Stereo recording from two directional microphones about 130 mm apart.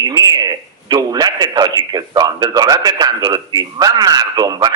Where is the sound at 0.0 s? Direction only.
30° right (ahead or behind).